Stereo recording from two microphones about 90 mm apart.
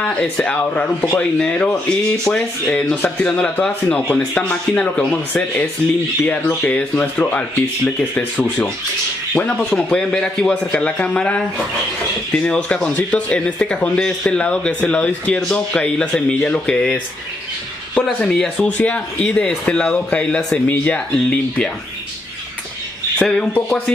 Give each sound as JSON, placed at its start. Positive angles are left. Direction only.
{"t": 0.0, "sound": "speech", "side_deg": 15}
{"t": 4.5, "sound": "speech", "side_deg": 15}
{"t": 18.0, "sound": "speech", "side_deg": 10}
{"t": 23.1, "sound": "speech", "side_deg": 10}